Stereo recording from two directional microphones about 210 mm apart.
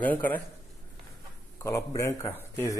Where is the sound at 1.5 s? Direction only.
15° left (ahead or behind).